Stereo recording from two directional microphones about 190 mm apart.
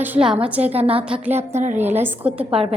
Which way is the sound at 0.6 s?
30° right (ahead or behind).